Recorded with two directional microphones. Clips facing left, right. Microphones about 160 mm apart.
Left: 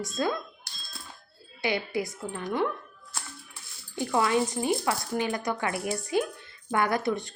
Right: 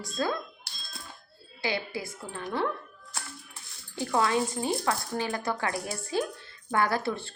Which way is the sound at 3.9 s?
20° left (ahead or behind).